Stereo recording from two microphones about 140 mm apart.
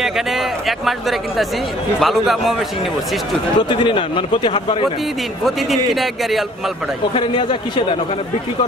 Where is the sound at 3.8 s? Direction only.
35° left (ahead or behind).